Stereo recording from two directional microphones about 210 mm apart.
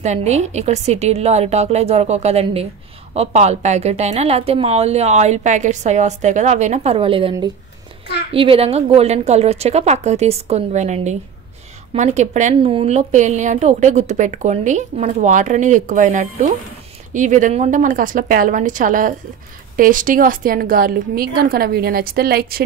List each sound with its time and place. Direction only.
0.0 s a woman's voice: 35° right (ahead or behind)